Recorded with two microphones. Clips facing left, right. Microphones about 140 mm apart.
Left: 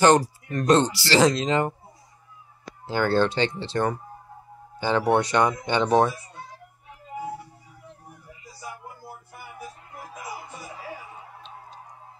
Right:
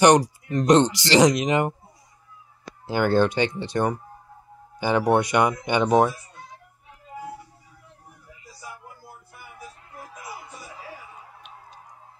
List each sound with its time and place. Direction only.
0.0 s speech: 20° right (ahead or behind)
2.9 s speech: 15° right (ahead or behind)